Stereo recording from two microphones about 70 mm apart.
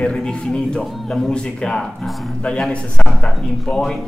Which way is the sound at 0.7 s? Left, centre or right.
Centre.